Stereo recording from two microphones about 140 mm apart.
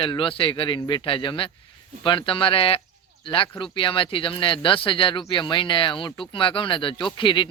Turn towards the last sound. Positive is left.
turn(degrees=35)  # may be behind; listen again after turning